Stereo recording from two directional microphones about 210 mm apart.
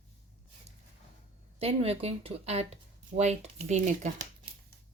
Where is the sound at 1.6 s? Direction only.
30° right (ahead or behind).